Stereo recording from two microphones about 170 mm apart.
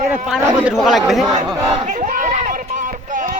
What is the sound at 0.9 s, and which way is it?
Speech, centre (ahead or behind).